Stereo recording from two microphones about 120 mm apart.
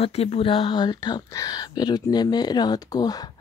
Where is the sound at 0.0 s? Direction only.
60° left (ahead or behind).